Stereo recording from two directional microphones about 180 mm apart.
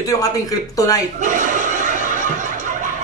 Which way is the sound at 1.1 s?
45° right (ahead or behind).